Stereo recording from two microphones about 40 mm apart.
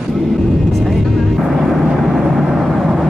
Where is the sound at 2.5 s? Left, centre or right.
Centre.